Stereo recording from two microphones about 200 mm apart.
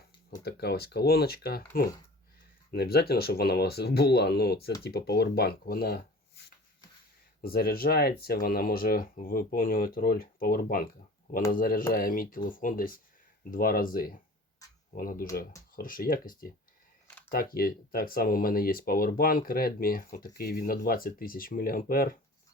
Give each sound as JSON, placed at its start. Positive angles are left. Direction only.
{"t": 0.3, "sound": "speech", "side_deg": 50}
{"t": 2.7, "sound": "speech", "side_deg": 50}
{"t": 7.4, "sound": "speech", "side_deg": 50}
{"t": 17.1, "sound": "a sound", "side_deg": 10}
{"t": 17.3, "sound": "speech", "side_deg": 45}